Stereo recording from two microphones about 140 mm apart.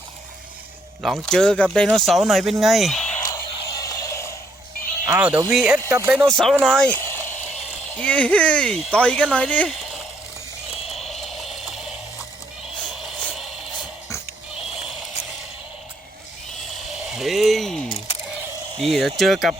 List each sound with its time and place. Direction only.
1.0 s speech: centre (ahead or behind)
3.2 s music: 25° left (ahead or behind)
5.0 s speech: 15° right (ahead or behind)
5.5 s speech: centre (ahead or behind)
5.9 s speech: 20° right (ahead or behind)
6.2 s speech: centre (ahead or behind)
10.8 s a sound: centre (ahead or behind)
12.8 s music: 10° right (ahead or behind)
16.7 s a sound: 5° right (ahead or behind)
18.8 s speech: centre (ahead or behind)